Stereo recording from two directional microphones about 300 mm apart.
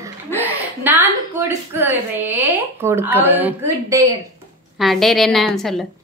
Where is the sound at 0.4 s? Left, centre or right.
Centre.